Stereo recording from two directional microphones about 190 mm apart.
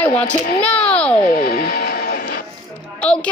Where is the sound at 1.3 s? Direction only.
55° left (ahead or behind).